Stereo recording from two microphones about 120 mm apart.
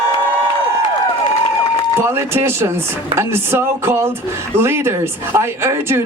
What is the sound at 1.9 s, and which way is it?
Speech, 20° right (ahead or behind).